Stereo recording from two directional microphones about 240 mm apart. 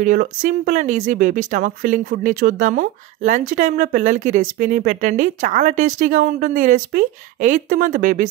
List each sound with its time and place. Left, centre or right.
0.0 s speech: right